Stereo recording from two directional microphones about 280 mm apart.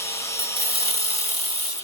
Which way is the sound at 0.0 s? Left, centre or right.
Centre.